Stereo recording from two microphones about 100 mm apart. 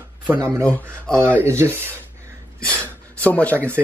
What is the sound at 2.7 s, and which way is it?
Speech, 15° left (ahead or behind).